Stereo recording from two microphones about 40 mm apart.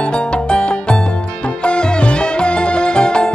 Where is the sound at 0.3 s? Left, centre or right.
Left.